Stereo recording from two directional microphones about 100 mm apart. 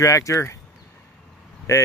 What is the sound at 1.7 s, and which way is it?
Speech, 30° left (ahead or behind).